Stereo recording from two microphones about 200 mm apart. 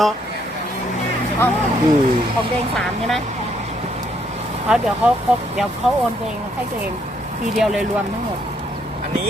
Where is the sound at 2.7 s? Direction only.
Centre (ahead or behind).